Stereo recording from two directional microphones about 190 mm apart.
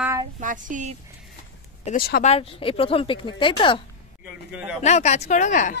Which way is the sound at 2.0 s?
50° left (ahead or behind).